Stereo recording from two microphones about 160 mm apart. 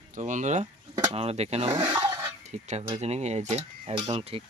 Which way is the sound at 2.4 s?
45° right (ahead or behind).